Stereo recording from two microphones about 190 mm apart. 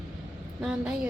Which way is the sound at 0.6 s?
5° right (ahead or behind).